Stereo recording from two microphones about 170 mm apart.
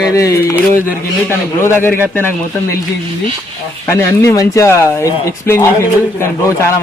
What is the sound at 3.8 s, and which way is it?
Speech, 15° left (ahead or behind).